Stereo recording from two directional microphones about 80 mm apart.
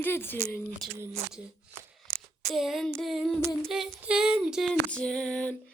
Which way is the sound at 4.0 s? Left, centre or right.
Centre.